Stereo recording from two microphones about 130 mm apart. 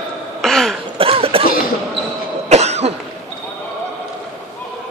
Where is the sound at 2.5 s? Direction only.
55° right (ahead or behind).